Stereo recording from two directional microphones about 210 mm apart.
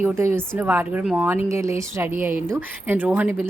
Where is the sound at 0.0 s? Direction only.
10° right (ahead or behind).